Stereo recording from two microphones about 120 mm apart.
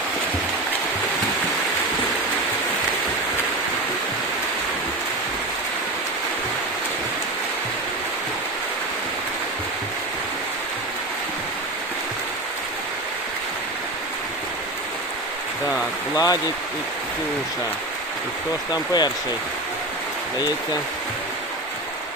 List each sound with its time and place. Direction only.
16.1 s speech: 30° left (ahead or behind)
18.7 s speech: 35° left (ahead or behind)